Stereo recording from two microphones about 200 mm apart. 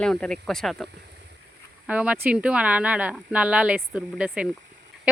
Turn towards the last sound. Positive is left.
turn(degrees=-5)  # may be behind; listen again after turning